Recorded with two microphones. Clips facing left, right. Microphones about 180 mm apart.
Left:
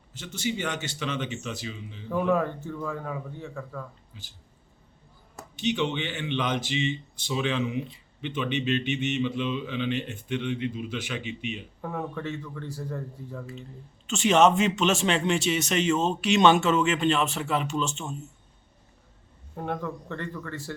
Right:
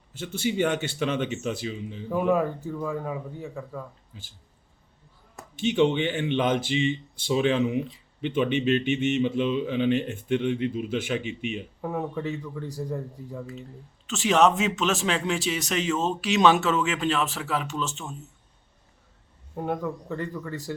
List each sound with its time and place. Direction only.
0.1 s a man's voice: 55° right (ahead or behind)
2.0 s a man's voice: 15° right (ahead or behind)
5.5 s speech: 50° right (ahead or behind)
11.8 s a man's voice: 20° right (ahead or behind)
14.1 s speech: centre (ahead or behind)
19.5 s a man's voice: 15° right (ahead or behind)